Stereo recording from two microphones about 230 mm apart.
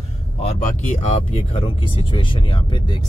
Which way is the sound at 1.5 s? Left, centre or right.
Left.